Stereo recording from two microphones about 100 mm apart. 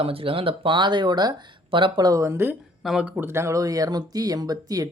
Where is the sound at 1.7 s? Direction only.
55° right (ahead or behind).